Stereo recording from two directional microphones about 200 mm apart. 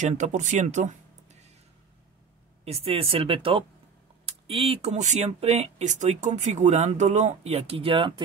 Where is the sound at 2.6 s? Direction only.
30° right (ahead or behind).